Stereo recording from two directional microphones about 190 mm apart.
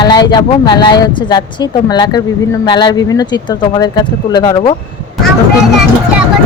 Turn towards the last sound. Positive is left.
turn(degrees=20)  # may be behind; listen again after turning